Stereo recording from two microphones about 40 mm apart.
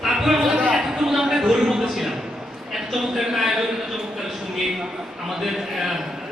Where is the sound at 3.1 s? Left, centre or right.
Centre.